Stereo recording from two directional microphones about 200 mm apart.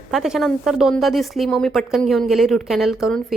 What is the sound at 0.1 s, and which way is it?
A woman's voice, centre (ahead or behind).